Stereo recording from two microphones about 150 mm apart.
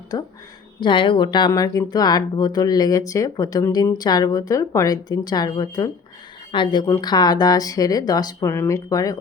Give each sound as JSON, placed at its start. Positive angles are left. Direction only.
{"t": 0.1, "sound": "speech", "side_deg": 25}